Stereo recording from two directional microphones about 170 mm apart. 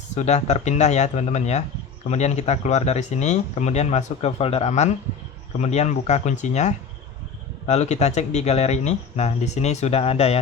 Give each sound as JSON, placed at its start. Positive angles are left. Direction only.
{"t": 0.2, "sound": "speech", "side_deg": 40}